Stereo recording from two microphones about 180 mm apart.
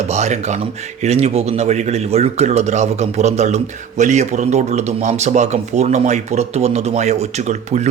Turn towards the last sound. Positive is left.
turn(degrees=-40)  # may be behind; listen again after turning